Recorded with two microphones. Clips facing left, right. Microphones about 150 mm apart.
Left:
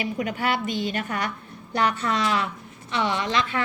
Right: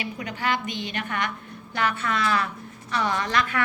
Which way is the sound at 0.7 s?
40° left (ahead or behind).